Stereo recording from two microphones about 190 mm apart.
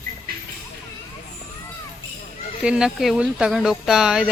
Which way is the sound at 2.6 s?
5° right (ahead or behind).